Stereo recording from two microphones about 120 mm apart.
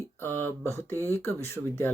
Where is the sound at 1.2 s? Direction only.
20° left (ahead or behind).